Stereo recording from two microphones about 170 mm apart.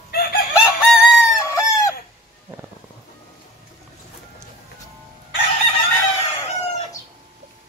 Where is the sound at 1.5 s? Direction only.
15° left (ahead or behind).